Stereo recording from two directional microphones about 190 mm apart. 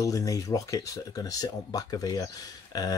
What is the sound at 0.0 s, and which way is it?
Speech, 20° left (ahead or behind).